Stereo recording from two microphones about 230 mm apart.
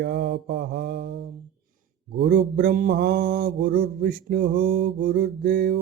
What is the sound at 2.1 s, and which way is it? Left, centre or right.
Mantra, right.